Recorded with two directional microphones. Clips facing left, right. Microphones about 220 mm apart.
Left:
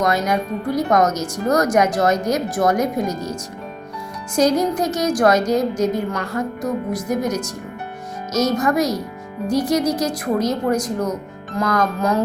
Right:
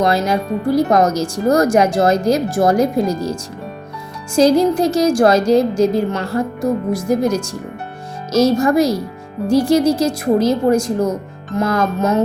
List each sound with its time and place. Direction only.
0.0 s speech: 30° right (ahead or behind)
4.4 s speech: 30° right (ahead or behind)